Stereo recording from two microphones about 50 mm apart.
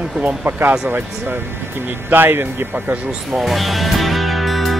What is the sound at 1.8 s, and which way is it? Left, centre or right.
Speech, right.